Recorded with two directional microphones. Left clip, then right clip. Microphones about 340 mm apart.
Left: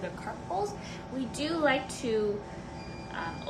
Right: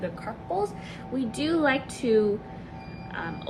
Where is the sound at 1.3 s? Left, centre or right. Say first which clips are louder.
Right 6 dB; centre.